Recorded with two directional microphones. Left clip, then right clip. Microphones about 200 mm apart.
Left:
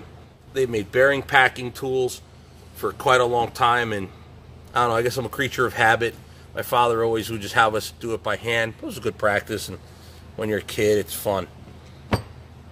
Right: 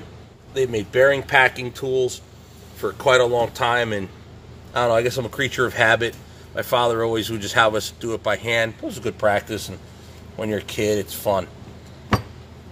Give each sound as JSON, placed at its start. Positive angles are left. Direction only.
{"t": 0.6, "sound": "speech", "side_deg": 20}